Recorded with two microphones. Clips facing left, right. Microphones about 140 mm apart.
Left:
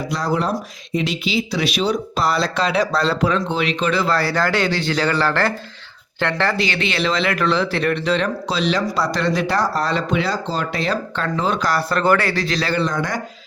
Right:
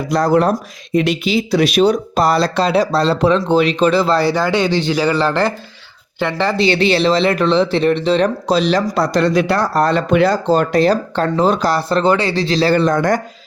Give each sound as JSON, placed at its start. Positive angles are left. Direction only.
{"t": 0.1, "sound": "a man's voice", "side_deg": -50}
{"t": 6.6, "sound": "speech", "side_deg": -35}
{"t": 12.7, "sound": "speech", "side_deg": -50}